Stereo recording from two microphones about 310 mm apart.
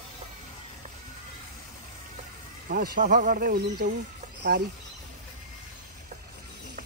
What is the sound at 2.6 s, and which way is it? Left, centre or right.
Speech, right.